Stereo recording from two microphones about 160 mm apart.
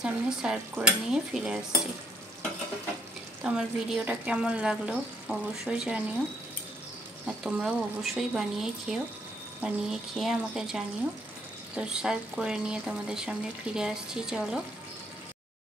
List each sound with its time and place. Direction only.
0.0 s speech: 5° right (ahead or behind)
3.4 s speech: 5° right (ahead or behind)
7.4 s speech: 5° right (ahead or behind)